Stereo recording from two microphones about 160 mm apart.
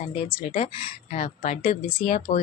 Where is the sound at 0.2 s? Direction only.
40° left (ahead or behind).